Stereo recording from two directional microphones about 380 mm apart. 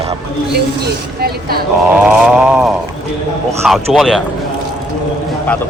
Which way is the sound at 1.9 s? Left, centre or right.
Centre.